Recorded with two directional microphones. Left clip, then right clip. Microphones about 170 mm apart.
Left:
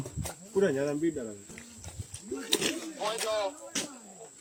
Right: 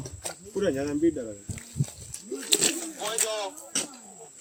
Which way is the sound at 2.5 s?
65° right (ahead or behind).